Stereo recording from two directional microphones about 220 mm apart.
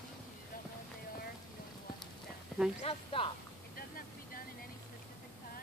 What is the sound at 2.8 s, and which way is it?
Speech, 25° left (ahead or behind).